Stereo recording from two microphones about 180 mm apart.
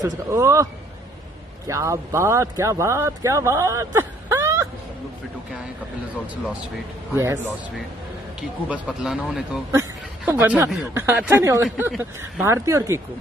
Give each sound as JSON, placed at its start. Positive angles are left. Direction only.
{"t": 0.0, "sound": "speech", "side_deg": -15}
{"t": 1.7, "sound": "speech", "side_deg": -15}
{"t": 8.4, "sound": "speech", "side_deg": -5}
{"t": 11.6, "sound": "speech", "side_deg": -5}